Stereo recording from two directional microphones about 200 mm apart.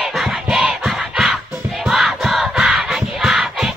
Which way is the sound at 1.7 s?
Centre (ahead or behind).